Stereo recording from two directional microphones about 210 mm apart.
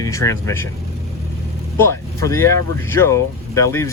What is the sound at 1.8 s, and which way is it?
Speech, 15° left (ahead or behind).